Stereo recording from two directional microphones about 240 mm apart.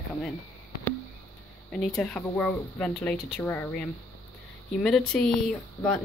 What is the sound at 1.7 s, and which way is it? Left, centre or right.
Speech, centre.